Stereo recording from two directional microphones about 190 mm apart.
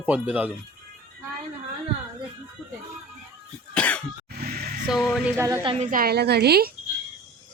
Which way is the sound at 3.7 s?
5° left (ahead or behind).